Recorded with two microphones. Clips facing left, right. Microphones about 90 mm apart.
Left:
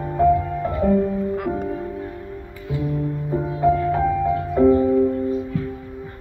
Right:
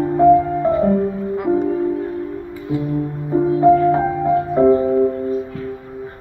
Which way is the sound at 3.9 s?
30° right (ahead or behind).